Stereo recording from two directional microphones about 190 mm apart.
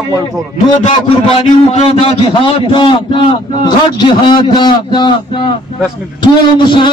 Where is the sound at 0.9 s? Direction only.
30° left (ahead or behind).